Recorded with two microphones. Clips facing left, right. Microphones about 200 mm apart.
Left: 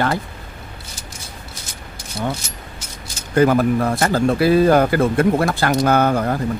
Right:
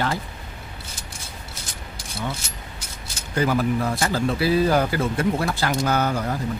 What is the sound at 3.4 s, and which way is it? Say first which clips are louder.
Speech: left 7 dB; 55° left (ahead or behind).